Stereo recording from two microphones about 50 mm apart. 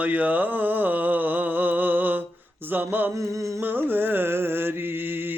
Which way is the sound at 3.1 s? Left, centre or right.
Right.